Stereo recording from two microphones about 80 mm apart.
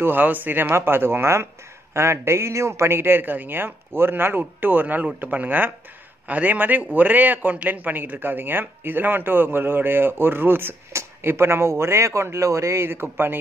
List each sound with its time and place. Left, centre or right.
0.0 s a man's voice: right